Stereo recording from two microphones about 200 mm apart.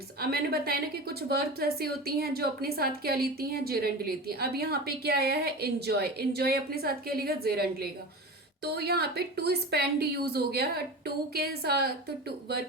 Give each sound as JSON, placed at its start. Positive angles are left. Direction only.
{"t": 0.2, "sound": "a woman's voice", "side_deg": -50}